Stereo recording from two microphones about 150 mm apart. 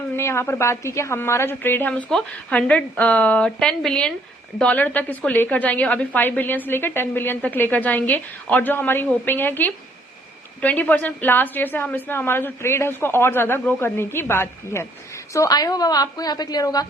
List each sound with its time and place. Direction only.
0.2 s a woman's voice: 15° left (ahead or behind)